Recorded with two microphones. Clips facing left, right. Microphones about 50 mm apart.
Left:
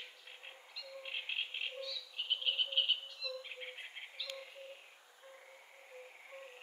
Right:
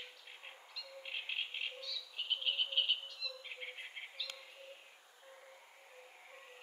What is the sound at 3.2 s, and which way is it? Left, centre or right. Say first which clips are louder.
Bird: left 3 dB; centre.